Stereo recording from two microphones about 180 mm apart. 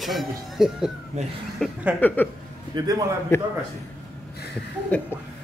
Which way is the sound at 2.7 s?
20° right (ahead or behind).